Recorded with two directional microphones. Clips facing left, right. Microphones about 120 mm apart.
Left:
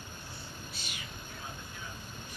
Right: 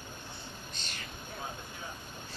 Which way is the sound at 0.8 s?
10° left (ahead or behind).